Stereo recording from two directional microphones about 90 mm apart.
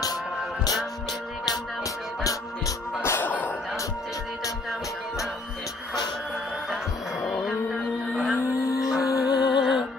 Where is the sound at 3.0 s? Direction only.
20° left (ahead or behind).